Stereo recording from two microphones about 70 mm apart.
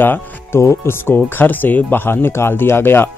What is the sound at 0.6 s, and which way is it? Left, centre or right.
Speech, left.